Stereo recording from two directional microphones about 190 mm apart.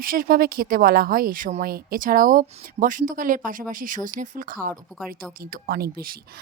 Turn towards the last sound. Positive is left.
turn(degrees=-50)  # may be behind; listen again after turning